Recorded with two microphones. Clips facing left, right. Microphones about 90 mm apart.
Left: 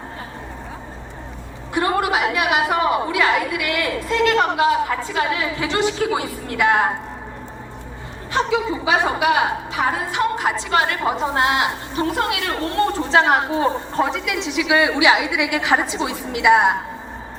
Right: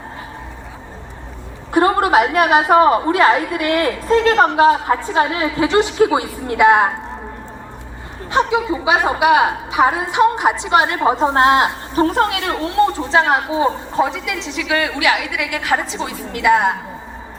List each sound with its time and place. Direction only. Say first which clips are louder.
1.7 s a woman's voice: right 6 dB; 35° right (ahead or behind)
8.3 s a woman's voice: right 3 dB; 20° right (ahead or behind)
11.3 s a woman's voice: right 6 dB; 40° right (ahead or behind)
12.6 s a woman's voice: right 4 dB; 5° right (ahead or behind)